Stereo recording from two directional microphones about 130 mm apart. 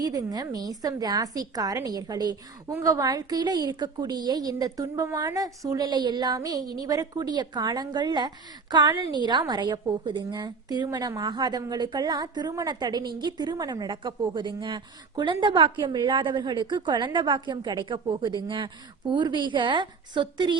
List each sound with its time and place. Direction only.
0.0 s a woman's voice: 30° right (ahead or behind)